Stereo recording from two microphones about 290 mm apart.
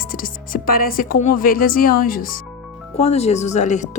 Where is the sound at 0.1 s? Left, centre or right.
Left.